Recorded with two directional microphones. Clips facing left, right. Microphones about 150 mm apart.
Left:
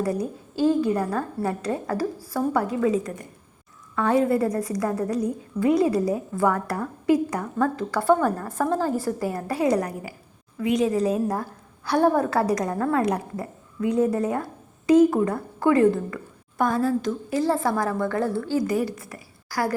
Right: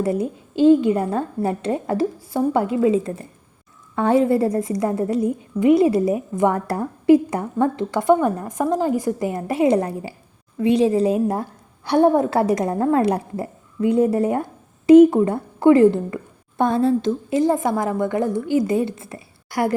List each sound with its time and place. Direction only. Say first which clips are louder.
0.0 s a woman's voice: right 4 dB; 25° right (ahead or behind)